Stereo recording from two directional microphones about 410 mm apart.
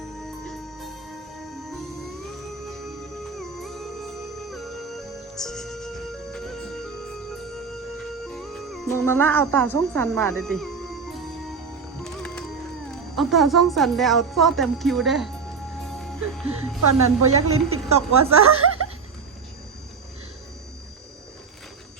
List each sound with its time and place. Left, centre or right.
0.4 s music: centre
3.3 s music: centre
7.7 s speech: centre
12.0 s music: centre
13.1 s speech: centre
15.8 s music: centre
16.8 s a woman's voice: right